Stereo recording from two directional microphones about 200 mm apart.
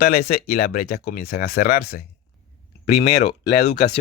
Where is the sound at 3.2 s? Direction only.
55° left (ahead or behind).